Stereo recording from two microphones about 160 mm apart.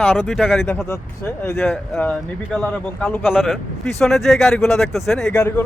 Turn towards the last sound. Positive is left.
turn(degrees=0)  # may be behind; listen again after turning